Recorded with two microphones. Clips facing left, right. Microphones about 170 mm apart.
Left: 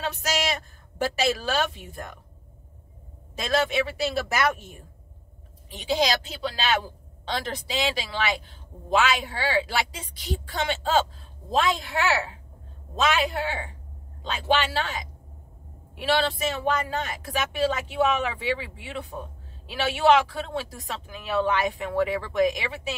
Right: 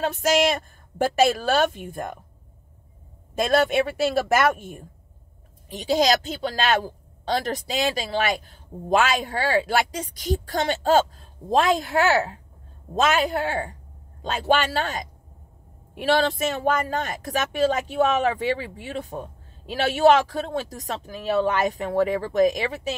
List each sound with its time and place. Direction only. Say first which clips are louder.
0.0 s speech: right 8 dB; 50° right (ahead or behind)
3.3 s speech: right 5 dB; 50° right (ahead or behind)